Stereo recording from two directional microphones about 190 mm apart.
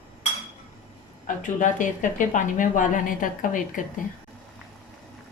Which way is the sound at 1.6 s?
45° left (ahead or behind).